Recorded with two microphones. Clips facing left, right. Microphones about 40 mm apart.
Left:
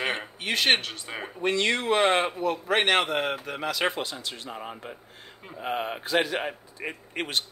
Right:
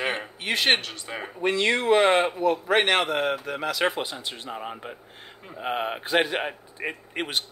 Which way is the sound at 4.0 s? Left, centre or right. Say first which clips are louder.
Right 2 dB; centre.